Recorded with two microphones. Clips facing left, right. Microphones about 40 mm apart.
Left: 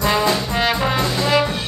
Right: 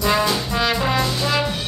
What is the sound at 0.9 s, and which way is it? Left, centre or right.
Trombone, left.